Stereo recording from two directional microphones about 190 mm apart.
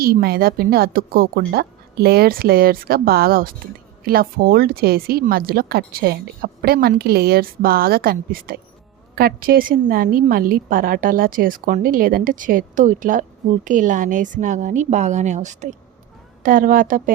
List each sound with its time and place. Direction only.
0.0 s speech: 55° right (ahead or behind)